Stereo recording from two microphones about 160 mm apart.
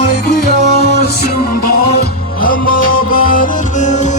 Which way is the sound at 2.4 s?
60° left (ahead or behind).